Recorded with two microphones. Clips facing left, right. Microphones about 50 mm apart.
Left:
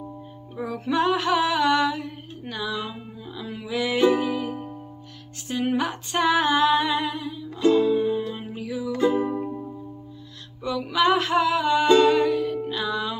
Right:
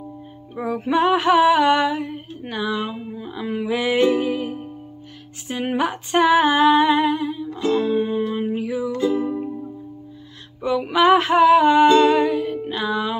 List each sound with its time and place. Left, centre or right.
0.6 s a sound: right
4.0 s music: right
5.5 s a sound: right
7.7 s music: right
9.0 s music: left
10.6 s music: right
11.9 s music: right